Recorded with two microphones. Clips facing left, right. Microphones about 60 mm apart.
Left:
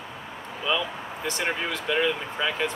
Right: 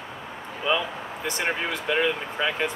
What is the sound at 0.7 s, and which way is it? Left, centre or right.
Speech, centre.